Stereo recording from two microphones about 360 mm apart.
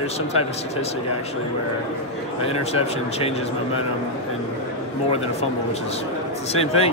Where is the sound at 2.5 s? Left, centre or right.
Centre.